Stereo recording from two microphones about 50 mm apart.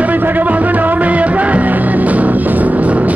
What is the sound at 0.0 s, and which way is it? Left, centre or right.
Music, right.